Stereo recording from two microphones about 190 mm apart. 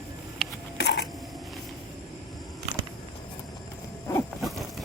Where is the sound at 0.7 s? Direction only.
65° left (ahead or behind).